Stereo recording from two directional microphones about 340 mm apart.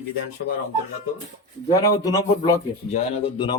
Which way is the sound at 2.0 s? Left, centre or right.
Centre.